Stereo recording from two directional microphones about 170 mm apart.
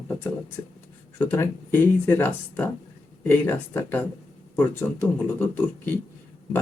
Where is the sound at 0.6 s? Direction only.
20° left (ahead or behind).